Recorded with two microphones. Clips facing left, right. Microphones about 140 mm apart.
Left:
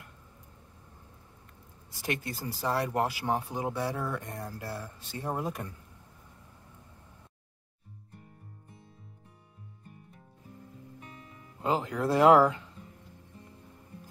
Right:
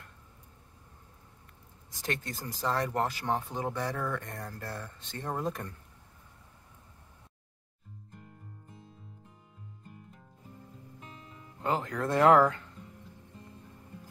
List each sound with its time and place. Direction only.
2.0 s speech: 10° left (ahead or behind)
11.0 s music: 25° right (ahead or behind)
11.6 s speech: 15° left (ahead or behind)